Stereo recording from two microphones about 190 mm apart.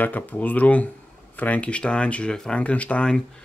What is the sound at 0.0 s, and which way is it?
Speech, 10° left (ahead or behind).